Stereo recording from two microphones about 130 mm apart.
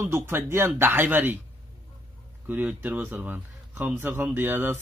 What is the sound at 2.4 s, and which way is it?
Speech, 15° right (ahead or behind).